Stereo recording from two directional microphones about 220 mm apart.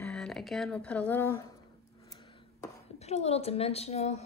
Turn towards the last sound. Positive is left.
turn(degrees=30)  # may be behind; listen again after turning